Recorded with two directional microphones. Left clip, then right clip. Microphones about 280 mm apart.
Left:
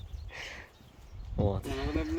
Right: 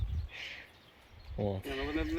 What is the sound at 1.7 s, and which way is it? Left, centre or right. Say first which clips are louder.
Speech: left 1 dB; left.